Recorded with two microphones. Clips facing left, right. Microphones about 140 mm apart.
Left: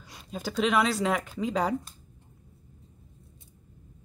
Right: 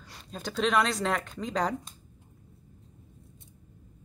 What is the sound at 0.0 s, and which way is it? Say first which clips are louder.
Speech: left 3 dB; 5° left (ahead or behind).